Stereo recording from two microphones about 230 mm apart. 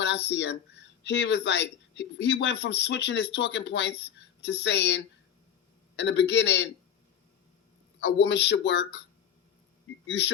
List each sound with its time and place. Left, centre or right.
0.0 s speech: left
8.0 s speech: left
10.1 s speech: left